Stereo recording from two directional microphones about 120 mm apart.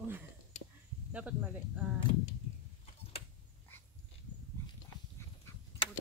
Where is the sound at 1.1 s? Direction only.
10° right (ahead or behind).